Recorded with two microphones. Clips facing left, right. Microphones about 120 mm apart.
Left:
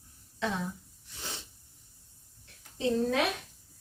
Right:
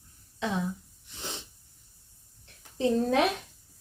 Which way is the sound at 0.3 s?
15° right (ahead or behind).